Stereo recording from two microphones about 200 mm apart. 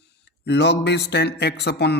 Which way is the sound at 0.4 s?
55° left (ahead or behind).